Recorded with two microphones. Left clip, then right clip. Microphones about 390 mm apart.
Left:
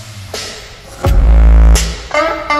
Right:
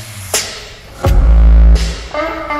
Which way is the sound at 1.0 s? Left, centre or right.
Centre.